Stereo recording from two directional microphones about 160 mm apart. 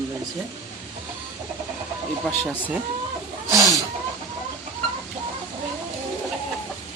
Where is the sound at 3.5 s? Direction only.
20° right (ahead or behind).